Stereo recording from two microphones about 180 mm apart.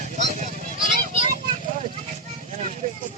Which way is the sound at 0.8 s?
40° left (ahead or behind).